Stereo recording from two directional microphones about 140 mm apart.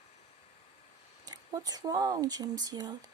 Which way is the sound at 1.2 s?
30° right (ahead or behind).